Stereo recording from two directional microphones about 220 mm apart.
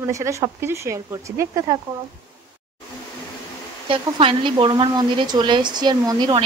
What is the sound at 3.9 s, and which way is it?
Speech, 25° right (ahead or behind).